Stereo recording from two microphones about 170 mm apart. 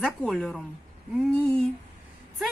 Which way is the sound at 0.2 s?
Centre (ahead or behind).